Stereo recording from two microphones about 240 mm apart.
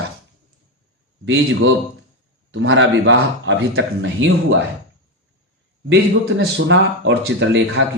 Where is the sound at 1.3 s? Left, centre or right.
Right.